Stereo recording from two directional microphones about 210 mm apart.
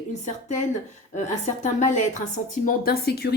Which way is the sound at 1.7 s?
35° left (ahead or behind).